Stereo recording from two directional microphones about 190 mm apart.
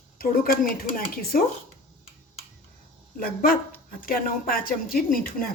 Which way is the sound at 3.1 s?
50° left (ahead or behind).